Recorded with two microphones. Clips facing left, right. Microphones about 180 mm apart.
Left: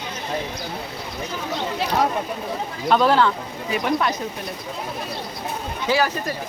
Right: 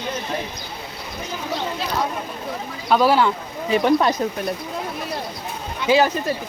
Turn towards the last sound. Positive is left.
turn(degrees=-20)  # may be behind; listen again after turning